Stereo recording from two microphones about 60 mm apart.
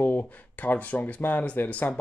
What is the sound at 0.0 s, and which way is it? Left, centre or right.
Speech, left.